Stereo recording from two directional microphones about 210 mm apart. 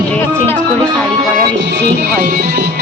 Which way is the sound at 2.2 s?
45° right (ahead or behind).